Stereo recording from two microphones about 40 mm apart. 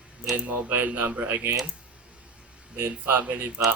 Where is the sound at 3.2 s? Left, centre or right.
Right.